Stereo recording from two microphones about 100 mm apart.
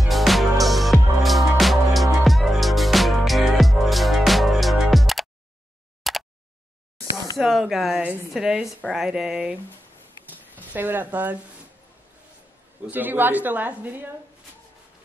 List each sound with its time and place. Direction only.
0.0 s music: centre (ahead or behind)
6.0 s a sound: centre (ahead or behind)
7.3 s speech: centre (ahead or behind)
8.0 s a woman's voice: 20° right (ahead or behind)
8.3 s a woman's voice: 5° right (ahead or behind)
10.7 s a woman's voice: 20° right (ahead or behind)
12.8 s a woman's voice: 20° right (ahead or behind)